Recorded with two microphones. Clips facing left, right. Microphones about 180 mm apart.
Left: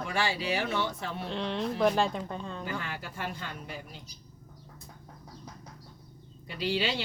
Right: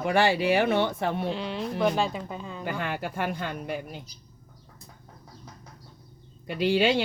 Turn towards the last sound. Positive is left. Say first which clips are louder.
# right 8 dB
turn(degrees=-55)  # may be behind; listen again after turning